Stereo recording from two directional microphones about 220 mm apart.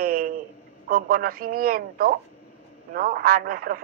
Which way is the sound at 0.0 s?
40° right (ahead or behind).